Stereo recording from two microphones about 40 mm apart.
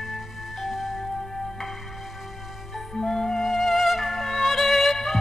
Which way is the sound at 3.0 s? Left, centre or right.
Centre.